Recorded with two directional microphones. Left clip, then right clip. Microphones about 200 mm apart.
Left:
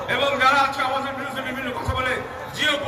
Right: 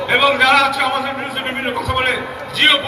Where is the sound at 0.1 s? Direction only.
30° left (ahead or behind).